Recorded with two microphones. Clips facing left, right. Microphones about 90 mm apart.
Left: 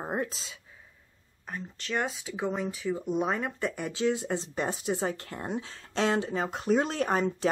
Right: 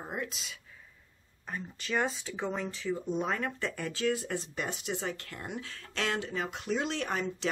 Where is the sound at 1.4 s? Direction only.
Centre (ahead or behind).